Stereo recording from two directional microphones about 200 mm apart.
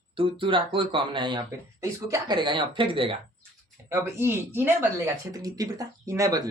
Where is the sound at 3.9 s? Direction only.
15° right (ahead or behind).